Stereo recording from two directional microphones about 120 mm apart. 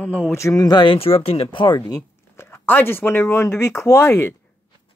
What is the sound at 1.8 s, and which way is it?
Speech, 20° left (ahead or behind).